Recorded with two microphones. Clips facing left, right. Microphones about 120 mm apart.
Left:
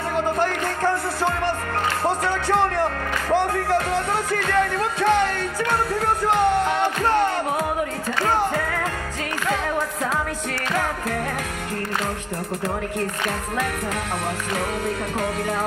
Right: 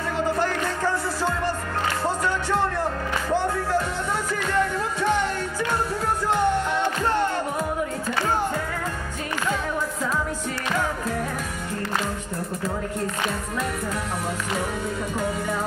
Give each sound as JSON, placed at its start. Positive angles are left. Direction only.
{"t": 0.8, "sound": "music", "side_deg": 60}
{"t": 2.2, "sound": "music", "side_deg": 70}